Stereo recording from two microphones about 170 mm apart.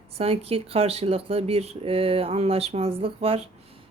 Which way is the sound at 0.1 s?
35° right (ahead or behind).